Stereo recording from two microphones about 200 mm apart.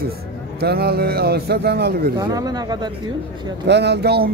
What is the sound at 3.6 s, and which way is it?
Speech, 60° right (ahead or behind).